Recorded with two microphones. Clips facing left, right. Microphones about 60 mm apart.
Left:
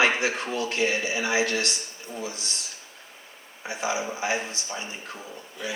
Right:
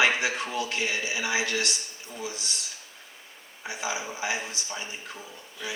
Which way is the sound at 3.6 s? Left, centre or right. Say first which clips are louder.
Left 4 dB; left.